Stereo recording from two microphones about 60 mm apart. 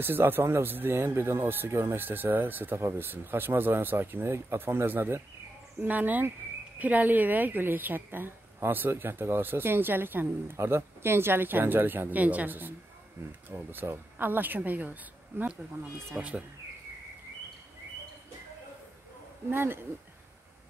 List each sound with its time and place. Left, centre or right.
0.0 s speech: right
1.7 s speech: right
2.0 s speech: right
19.5 s speech: right